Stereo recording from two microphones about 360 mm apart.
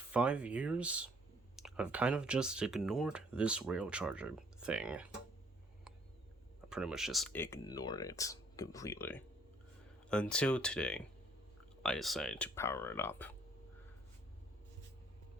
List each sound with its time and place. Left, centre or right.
0.1 s speech: centre
6.7 s speech: centre